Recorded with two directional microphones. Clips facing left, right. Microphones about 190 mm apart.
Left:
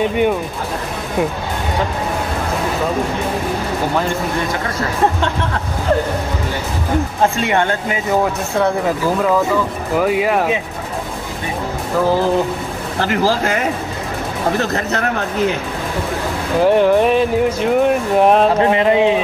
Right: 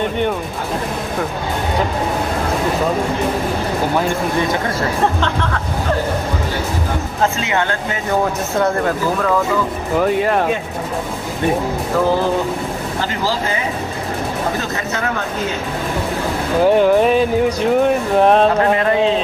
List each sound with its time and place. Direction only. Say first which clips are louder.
8.1 s speech: left 1 dB; centre (ahead or behind)
9.9 s speech: even; 5° left (ahead or behind)
16.6 s speech: even; centre (ahead or behind)
18.6 s a sound: left 2 dB; 20° left (ahead or behind)